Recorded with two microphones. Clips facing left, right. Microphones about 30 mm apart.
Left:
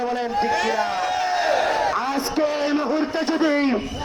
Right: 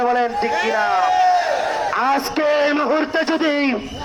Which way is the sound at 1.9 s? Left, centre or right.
Right.